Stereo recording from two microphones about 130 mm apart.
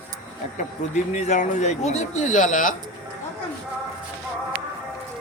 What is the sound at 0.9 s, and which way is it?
Speech, 65° left (ahead or behind).